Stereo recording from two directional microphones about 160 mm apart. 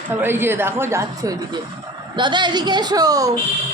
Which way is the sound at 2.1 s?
30° right (ahead or behind).